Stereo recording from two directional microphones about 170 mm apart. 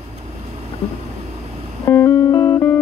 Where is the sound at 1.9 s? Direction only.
20° left (ahead or behind).